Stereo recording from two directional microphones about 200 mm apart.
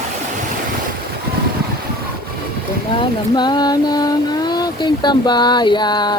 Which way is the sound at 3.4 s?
20° left (ahead or behind).